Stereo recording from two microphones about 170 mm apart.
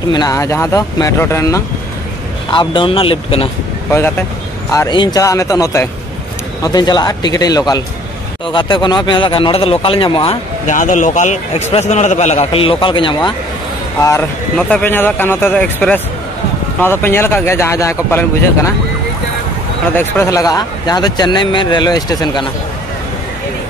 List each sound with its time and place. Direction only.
0.1 s speech: 20° left (ahead or behind)
2.5 s a man's voice: 30° left (ahead or behind)
4.7 s speech: 25° left (ahead or behind)
10.7 s a man's voice: 50° left (ahead or behind); by 13.3 s 30° left (ahead or behind)
14.6 s speech: 10° left (ahead or behind)
20.0 s speech: 15° left (ahead or behind)